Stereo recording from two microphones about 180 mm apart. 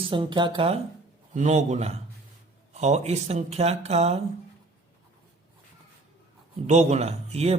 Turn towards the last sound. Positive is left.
turn(degrees=-35)  # may be behind; listen again after turning